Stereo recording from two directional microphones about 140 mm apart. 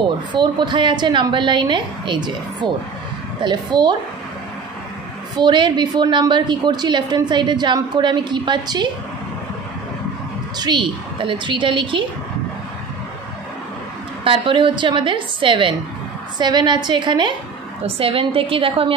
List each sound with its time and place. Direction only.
0.3 s a woman's voice: 35° right (ahead or behind)
5.4 s a woman's voice: 35° right (ahead or behind)
10.6 s a woman's voice: 35° right (ahead or behind)
14.2 s a woman's voice: 35° right (ahead or behind)